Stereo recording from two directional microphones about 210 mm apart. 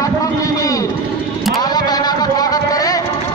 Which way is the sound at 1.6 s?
20° left (ahead or behind).